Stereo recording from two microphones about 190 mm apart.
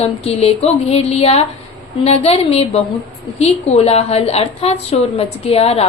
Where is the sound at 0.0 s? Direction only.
30° left (ahead or behind).